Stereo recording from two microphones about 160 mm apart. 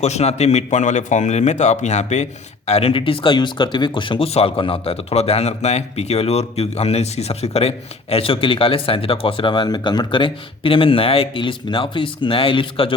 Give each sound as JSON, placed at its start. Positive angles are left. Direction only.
{"t": 0.0, "sound": "speech", "side_deg": 45}